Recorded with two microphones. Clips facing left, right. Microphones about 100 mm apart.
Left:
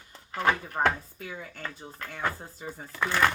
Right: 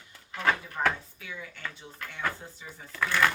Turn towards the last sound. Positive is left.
turn(degrees=20)  # may be behind; listen again after turning